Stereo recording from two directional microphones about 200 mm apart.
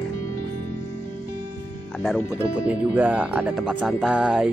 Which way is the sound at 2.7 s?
5° right (ahead or behind).